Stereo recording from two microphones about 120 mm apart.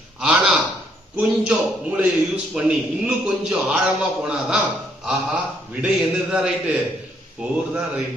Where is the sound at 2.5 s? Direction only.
5° right (ahead or behind).